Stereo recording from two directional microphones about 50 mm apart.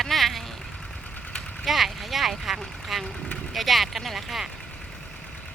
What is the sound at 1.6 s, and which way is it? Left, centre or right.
Speech, centre.